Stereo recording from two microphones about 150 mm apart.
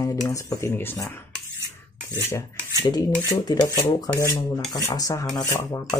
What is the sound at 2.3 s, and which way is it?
Cutlery, 20° left (ahead or behind).